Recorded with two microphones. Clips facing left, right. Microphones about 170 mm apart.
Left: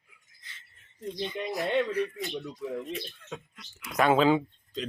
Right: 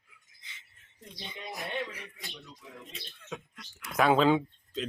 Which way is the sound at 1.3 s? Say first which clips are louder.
Left 8 dB; 90° left.